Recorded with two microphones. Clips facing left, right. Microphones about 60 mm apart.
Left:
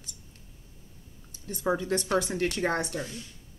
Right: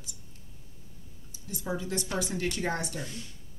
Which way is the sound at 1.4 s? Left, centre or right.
Left.